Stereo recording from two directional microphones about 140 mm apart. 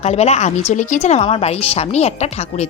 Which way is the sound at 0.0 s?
50° left (ahead or behind).